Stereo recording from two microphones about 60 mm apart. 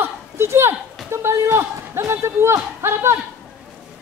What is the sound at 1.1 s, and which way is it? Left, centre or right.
Speech, right.